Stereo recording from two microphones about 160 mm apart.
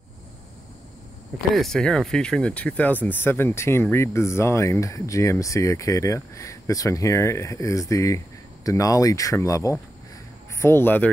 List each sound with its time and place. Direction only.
1.5 s speech: centre (ahead or behind)